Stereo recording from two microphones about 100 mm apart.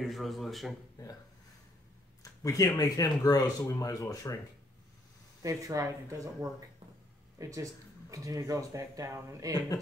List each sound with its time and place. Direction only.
0.0 s speech: centre (ahead or behind)
2.2 s speech: 35° left (ahead or behind)
5.4 s speech: 35° right (ahead or behind)